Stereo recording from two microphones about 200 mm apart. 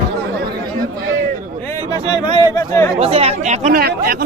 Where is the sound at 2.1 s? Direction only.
20° left (ahead or behind).